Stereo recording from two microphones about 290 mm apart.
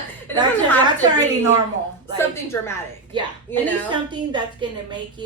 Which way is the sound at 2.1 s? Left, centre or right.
Centre.